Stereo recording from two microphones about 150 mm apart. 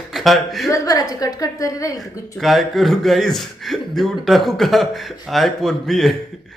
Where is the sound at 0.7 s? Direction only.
25° left (ahead or behind).